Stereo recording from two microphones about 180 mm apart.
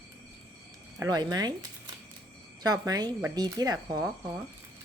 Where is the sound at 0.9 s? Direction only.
20° right (ahead or behind).